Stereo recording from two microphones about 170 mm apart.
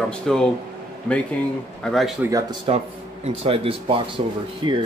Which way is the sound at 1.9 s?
5° left (ahead or behind).